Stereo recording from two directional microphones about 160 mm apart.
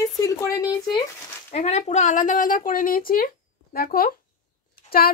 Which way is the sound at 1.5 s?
40° left (ahead or behind).